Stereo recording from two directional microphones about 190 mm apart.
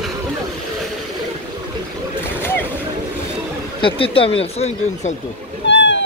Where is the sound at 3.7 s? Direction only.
30° left (ahead or behind).